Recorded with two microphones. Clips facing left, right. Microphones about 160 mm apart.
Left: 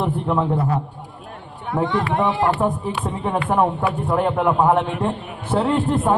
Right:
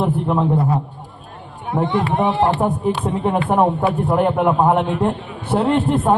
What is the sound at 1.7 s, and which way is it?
A man's voice, 20° right (ahead or behind).